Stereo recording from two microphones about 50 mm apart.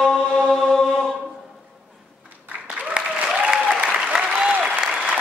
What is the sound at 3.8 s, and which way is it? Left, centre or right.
Applause, centre.